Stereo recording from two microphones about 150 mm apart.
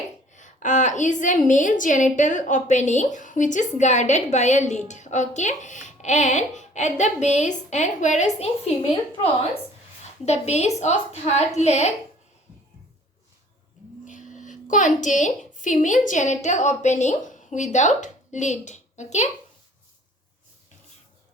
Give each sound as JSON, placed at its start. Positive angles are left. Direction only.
{"t": 0.3, "sound": "a woman's voice", "side_deg": 55}
{"t": 10.2, "sound": "a woman's voice", "side_deg": 45}
{"t": 14.0, "sound": "a sound", "side_deg": 55}
{"t": 16.0, "sound": "a woman's voice", "side_deg": 55}